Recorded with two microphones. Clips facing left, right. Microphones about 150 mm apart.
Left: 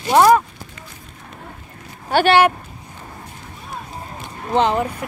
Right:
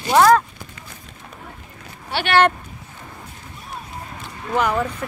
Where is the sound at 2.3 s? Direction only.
10° left (ahead or behind).